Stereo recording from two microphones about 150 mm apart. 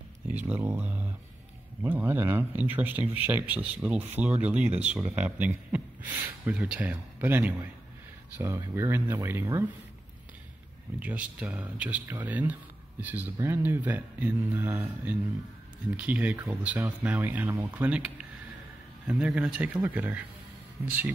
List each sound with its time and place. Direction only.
0.3 s speech: 10° right (ahead or behind)
11.0 s speech: 10° right (ahead or behind)